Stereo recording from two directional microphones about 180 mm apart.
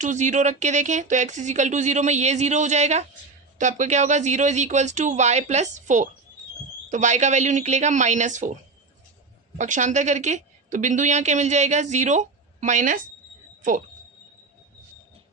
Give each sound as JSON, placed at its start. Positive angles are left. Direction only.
{"t": 0.0, "sound": "a woman's voice", "side_deg": -45}
{"t": 9.6, "sound": "a woman's voice", "side_deg": -45}